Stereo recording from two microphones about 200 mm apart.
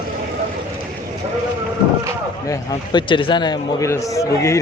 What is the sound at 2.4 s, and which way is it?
A man's voice, 20° left (ahead or behind).